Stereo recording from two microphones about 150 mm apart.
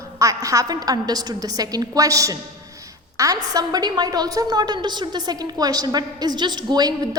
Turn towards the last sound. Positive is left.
turn(degrees=-25)  # may be behind; listen again after turning